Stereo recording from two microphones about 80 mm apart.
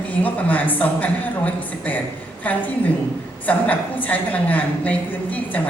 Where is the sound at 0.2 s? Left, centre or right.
Centre.